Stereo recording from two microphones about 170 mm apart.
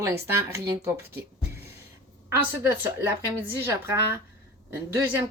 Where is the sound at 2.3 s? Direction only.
15° right (ahead or behind).